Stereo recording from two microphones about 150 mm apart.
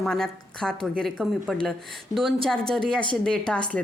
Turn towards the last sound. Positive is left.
turn(degrees=5)  # may be behind; listen again after turning